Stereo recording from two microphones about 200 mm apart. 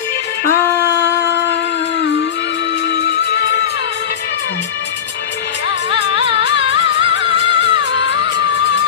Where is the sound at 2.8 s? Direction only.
60° left (ahead or behind).